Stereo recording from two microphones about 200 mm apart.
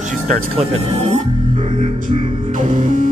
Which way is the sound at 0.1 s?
35° right (ahead or behind).